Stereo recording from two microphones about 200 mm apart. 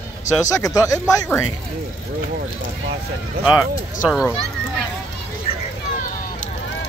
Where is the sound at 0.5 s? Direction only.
15° left (ahead or behind).